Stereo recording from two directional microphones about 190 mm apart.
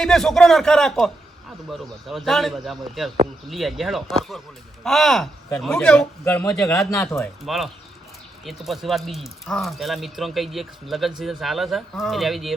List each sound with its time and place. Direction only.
0.0 s a man's voice: 5° left (ahead or behind)
7.4 s speech: centre (ahead or behind)